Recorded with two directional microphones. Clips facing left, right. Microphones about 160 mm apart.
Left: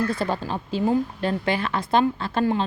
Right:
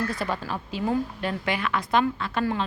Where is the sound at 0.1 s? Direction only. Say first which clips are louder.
Left 4 dB; 30° left (ahead or behind).